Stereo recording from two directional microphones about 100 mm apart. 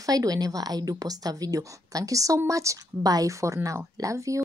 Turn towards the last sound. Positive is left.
turn(degrees=-35)  # may be behind; listen again after turning